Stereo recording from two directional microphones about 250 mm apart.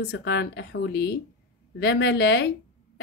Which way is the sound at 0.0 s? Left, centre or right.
Left.